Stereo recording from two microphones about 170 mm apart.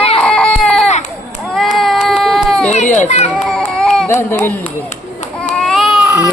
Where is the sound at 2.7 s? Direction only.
45° left (ahead or behind).